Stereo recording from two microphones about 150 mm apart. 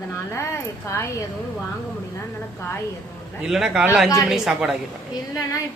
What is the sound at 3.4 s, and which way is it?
A man's voice, 5° right (ahead or behind).